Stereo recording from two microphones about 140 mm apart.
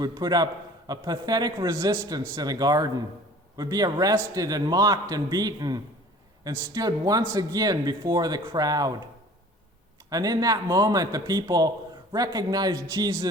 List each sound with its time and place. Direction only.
0.0 s speech: 30° right (ahead or behind)
10.1 s speech: 25° right (ahead or behind)